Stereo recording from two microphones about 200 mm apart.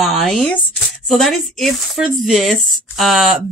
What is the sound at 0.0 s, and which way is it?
Speech, centre (ahead or behind).